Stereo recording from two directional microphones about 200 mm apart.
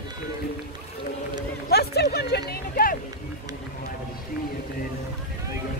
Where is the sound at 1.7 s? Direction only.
55° left (ahead or behind).